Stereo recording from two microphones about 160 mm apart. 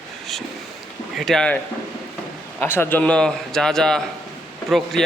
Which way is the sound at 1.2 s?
5° left (ahead or behind).